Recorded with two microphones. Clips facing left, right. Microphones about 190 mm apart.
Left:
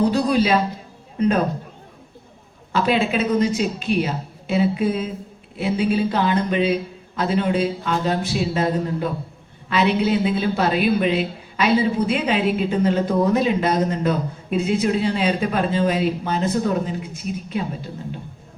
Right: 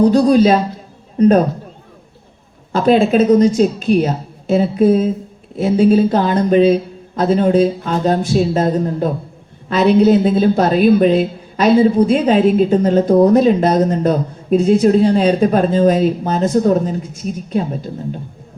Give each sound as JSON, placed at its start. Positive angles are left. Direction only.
{"t": 0.1, "sound": "speech", "side_deg": -45}
{"t": 2.7, "sound": "speech", "side_deg": -45}